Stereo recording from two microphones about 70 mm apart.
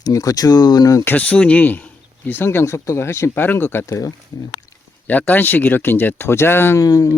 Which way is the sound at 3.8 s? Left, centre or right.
Left.